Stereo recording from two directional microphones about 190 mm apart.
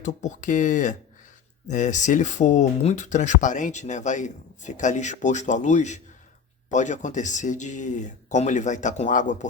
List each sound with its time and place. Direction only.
0.0 s speech: 40° left (ahead or behind)